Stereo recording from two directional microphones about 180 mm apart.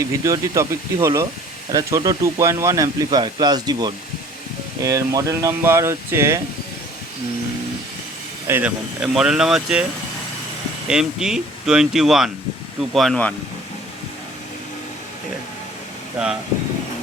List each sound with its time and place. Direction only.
0.1 s speech: 15° right (ahead or behind)
8.4 s speech: 10° right (ahead or behind)
10.8 s speech: 5° right (ahead or behind)